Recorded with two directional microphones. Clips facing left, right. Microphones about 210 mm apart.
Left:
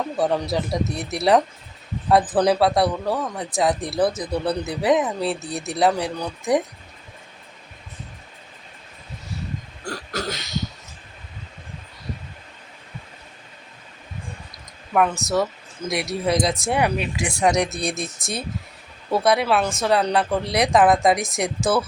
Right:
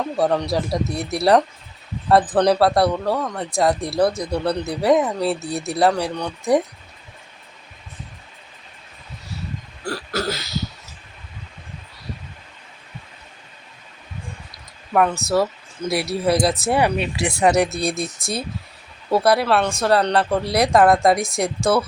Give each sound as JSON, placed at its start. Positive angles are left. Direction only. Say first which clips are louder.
{"t": 0.2, "sound": "speech", "louder": "right 2 dB", "side_deg": 0}
{"t": 9.8, "sound": "throat clearing", "louder": "right 4 dB", "side_deg": -5}
{"t": 14.9, "sound": "speech", "louder": "right 2 dB", "side_deg": 0}